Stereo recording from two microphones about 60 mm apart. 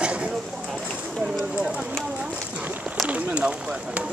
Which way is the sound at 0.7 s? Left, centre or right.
Centre.